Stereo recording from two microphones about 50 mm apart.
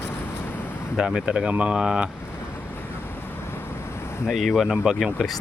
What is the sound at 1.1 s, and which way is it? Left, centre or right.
Speech, centre.